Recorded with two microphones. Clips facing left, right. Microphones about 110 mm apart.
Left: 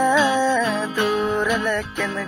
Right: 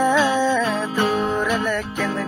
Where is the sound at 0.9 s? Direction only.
35° right (ahead or behind).